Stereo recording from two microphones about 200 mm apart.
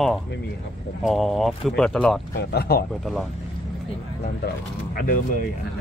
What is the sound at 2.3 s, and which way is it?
Speech, 50° left (ahead or behind).